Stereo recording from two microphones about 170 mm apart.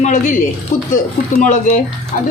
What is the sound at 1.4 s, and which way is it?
Speech, 45° left (ahead or behind).